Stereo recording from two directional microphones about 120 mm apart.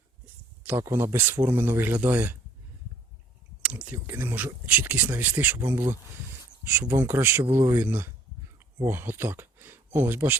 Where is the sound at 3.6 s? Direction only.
10° right (ahead or behind).